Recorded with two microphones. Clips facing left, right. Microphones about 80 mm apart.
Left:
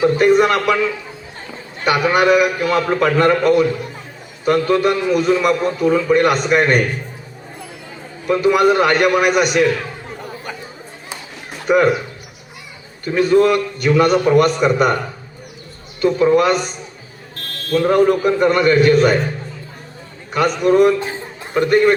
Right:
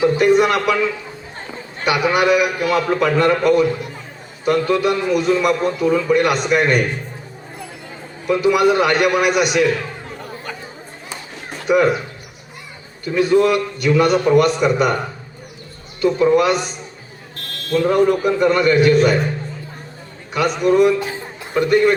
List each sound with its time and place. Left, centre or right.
0.0 s a man's voice: left
1.8 s a man's voice: left
8.3 s a man's voice: left
11.7 s a man's voice: left
13.1 s a man's voice: left
16.0 s a man's voice: left
17.3 s buzzer: left
18.3 s a man's voice: left
20.6 s a man's voice: left